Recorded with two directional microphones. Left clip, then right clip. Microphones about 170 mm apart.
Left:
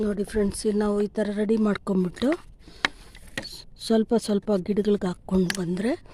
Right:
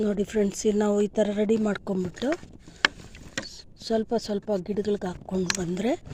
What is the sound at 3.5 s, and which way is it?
A woman's voice, 30° left (ahead or behind).